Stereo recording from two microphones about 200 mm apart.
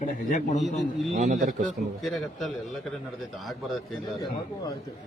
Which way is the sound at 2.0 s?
Centre (ahead or behind).